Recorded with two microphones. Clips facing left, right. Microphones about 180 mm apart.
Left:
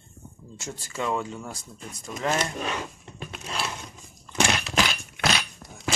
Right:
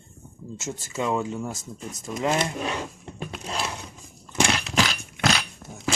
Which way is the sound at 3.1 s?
35° right (ahead or behind).